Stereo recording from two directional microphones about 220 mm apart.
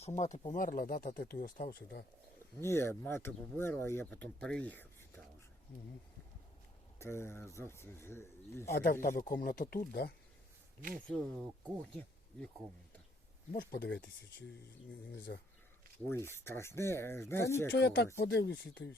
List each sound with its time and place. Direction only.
0.2 s speech: 30° left (ahead or behind)
2.6 s speech: 10° left (ahead or behind)
7.0 s speech: 10° left (ahead or behind)
8.7 s speech: 40° left (ahead or behind)
10.9 s speech: centre (ahead or behind)
13.5 s speech: 40° left (ahead or behind)
15.3 s speech: 50° left (ahead or behind)
16.0 s speech: 10° left (ahead or behind)
17.7 s speech: 50° left (ahead or behind)